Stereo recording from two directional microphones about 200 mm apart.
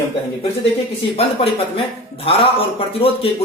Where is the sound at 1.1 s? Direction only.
25° left (ahead or behind).